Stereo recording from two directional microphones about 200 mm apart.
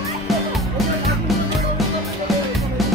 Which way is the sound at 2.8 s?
Centre (ahead or behind).